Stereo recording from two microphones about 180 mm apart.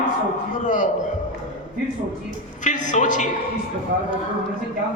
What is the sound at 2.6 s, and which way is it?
Speech, 45° left (ahead or behind).